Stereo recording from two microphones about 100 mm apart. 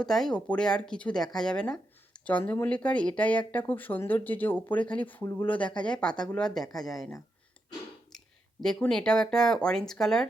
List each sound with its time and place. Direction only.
0.0 s speech: 5° left (ahead or behind)
2.4 s speech: 25° left (ahead or behind)
2.6 s speech: 10° left (ahead or behind)
8.9 s speech: 5° left (ahead or behind)